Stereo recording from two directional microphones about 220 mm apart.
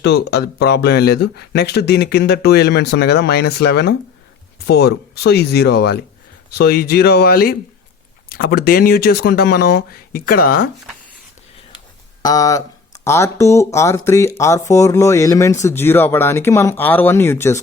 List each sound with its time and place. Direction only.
0.0 s speech: 45° left (ahead or behind)
12.2 s speech: 15° left (ahead or behind)